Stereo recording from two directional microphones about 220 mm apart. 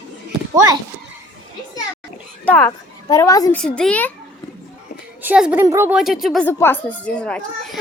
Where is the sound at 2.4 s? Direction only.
10° left (ahead or behind).